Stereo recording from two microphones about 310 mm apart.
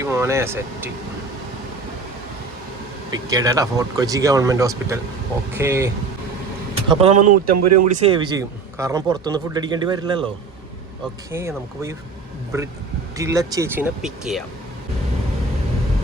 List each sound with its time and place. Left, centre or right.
0.0 s a man's voice: centre
3.1 s a man's voice: centre
11.3 s a man's voice: centre